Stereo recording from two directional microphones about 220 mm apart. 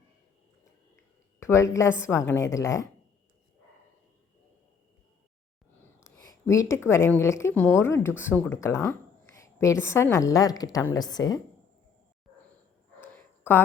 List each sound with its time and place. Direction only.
1.4 s speech: 10° left (ahead or behind)
5.8 s speech: 10° left (ahead or behind)
13.0 s a sound: 10° left (ahead or behind)